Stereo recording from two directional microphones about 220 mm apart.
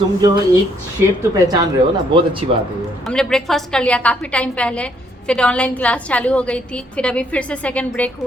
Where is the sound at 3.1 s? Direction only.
Centre (ahead or behind).